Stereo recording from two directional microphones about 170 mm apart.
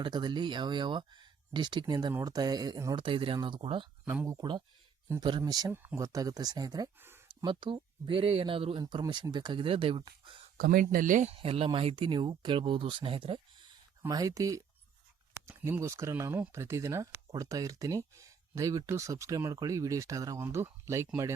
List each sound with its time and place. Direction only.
0.0 s speech: 25° right (ahead or behind)
4.0 s speech: 15° right (ahead or behind)
7.3 s speech: 25° right (ahead or behind)
10.6 s speech: 55° right (ahead or behind)
11.3 s speech: 35° right (ahead or behind); by 21.3 s 15° right (ahead or behind)